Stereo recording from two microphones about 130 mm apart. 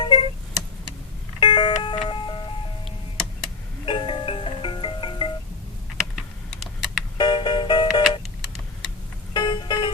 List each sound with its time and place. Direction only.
0.0 s a sound: 45° left (ahead or behind)
1.4 s doorbell: 35° left (ahead or behind)
2.0 s a sound: 40° left (ahead or behind)
3.8 s music: 40° left (ahead or behind)
6.1 s typing: centre (ahead or behind)
7.2 s music: 35° left (ahead or behind)
9.3 s music: 35° left (ahead or behind)